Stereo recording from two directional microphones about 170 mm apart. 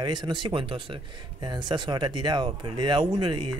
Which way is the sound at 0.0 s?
25° right (ahead or behind).